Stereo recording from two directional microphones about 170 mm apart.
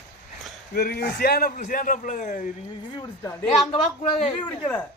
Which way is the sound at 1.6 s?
55° left (ahead or behind).